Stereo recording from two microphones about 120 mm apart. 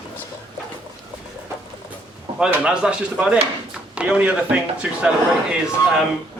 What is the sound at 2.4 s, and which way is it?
A man's voice, 10° right (ahead or behind).